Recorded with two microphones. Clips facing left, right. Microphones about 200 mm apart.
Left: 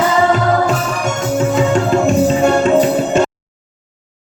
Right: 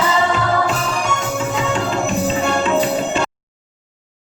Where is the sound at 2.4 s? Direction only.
45° left (ahead or behind).